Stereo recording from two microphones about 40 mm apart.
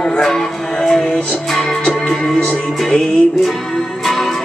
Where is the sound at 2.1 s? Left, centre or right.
Centre.